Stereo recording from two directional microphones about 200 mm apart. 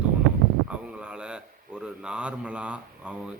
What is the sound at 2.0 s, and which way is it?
Speech, 5° right (ahead or behind).